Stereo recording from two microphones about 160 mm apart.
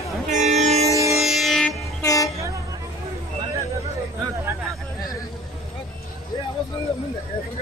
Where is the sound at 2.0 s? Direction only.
20° left (ahead or behind).